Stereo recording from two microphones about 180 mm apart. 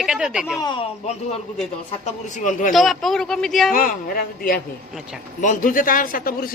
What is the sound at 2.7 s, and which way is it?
Speech, centre (ahead or behind).